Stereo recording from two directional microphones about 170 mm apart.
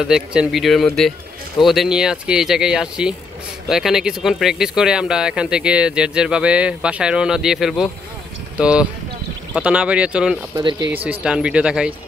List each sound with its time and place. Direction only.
0.1 s speech: 5° right (ahead or behind)
10.5 s speech: 25° right (ahead or behind)
11.1 s speech: 5° right (ahead or behind)